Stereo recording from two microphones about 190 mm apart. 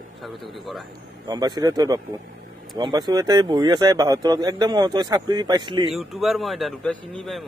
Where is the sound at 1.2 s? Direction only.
20° right (ahead or behind).